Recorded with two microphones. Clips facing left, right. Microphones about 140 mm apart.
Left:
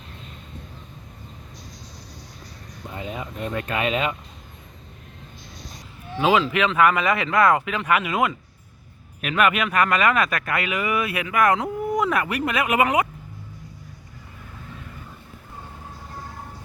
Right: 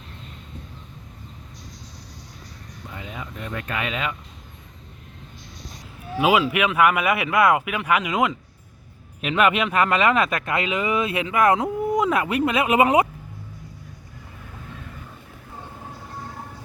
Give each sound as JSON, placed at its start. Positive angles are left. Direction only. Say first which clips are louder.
{"t": 2.9, "sound": "speech", "louder": "left 4 dB", "side_deg": 25}
{"t": 6.1, "sound": "speech", "louder": "even", "side_deg": -10}